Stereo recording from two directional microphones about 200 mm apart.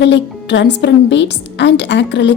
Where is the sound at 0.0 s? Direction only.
60° left (ahead or behind).